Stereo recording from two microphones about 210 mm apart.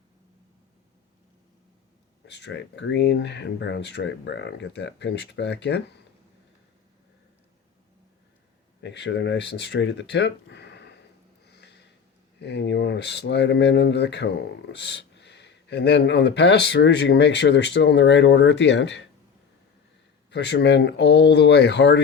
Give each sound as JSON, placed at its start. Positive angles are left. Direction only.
{"t": 2.2, "sound": "speech", "side_deg": 55}
{"t": 8.8, "sound": "speech", "side_deg": 55}
{"t": 11.4, "sound": "a sound", "side_deg": 55}
{"t": 12.4, "sound": "speech", "side_deg": 55}
{"t": 20.3, "sound": "speech", "side_deg": 55}